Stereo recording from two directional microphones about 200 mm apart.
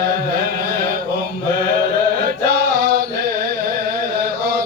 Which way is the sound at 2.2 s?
50° right (ahead or behind).